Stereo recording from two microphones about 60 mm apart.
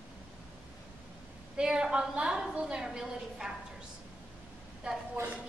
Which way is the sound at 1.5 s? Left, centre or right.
Centre.